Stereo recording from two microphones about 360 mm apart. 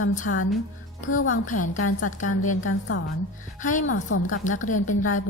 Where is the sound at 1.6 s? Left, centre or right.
Left.